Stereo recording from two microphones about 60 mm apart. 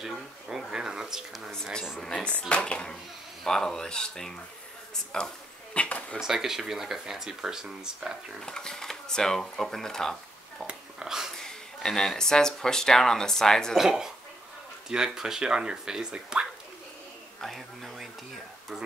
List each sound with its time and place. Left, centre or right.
0.0 s speech: centre
1.5 s speech: centre
6.1 s speech: centre
8.4 s speech: centre
10.7 s a sound: centre
11.3 s speech: centre
13.7 s speech: centre
17.4 s speech: centre